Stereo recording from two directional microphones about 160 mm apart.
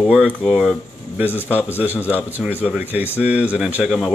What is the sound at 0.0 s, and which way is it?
Speech, 5° right (ahead or behind).